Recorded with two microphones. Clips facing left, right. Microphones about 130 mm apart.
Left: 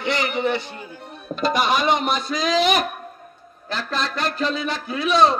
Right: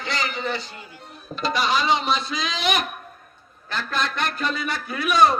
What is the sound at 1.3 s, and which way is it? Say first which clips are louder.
A man's voice: left 3 dB; 50° left (ahead or behind).